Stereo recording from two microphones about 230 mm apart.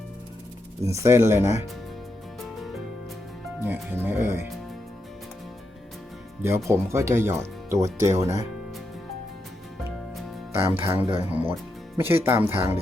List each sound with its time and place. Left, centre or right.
0.9 s speech: centre
3.6 s speech: centre
6.4 s speech: centre
10.6 s speech: centre
10.9 s speech: right
11.3 s speech: centre